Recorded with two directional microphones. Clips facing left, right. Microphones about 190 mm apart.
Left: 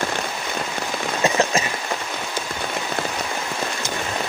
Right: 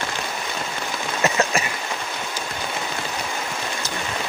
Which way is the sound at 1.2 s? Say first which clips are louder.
Left 1 dB; 15° left (ahead or behind).